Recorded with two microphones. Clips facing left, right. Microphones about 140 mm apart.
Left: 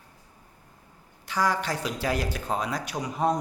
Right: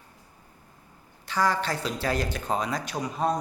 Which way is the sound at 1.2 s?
10° left (ahead or behind).